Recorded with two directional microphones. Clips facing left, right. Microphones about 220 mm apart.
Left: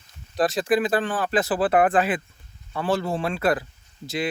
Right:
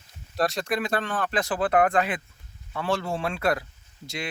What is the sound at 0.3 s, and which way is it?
Speech, centre (ahead or behind).